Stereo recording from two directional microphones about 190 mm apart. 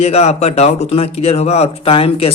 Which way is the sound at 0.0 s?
35° left (ahead or behind).